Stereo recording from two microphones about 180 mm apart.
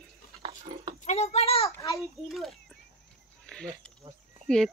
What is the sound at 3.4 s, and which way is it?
Livestock, 5° left (ahead or behind).